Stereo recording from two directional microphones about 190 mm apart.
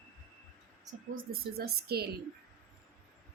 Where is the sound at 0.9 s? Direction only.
50° right (ahead or behind).